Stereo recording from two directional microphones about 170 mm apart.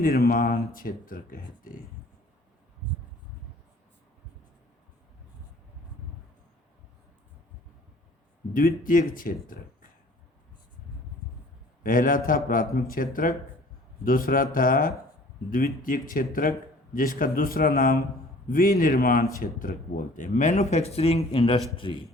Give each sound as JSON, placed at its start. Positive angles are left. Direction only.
{"t": 0.0, "sound": "speech", "side_deg": 60}
{"t": 8.5, "sound": "speech", "side_deg": 55}
{"t": 11.8, "sound": "speech", "side_deg": 55}